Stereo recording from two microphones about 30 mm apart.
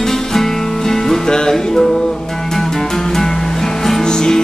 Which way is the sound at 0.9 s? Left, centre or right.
Centre.